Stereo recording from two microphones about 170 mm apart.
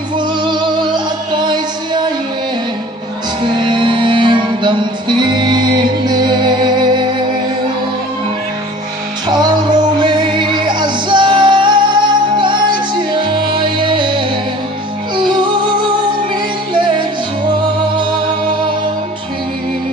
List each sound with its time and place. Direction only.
0.2 s music: 30° right (ahead or behind)
3.6 s music: 30° right (ahead or behind)
9.2 s music: 25° right (ahead or behind)
17.9 s music: 30° right (ahead or behind)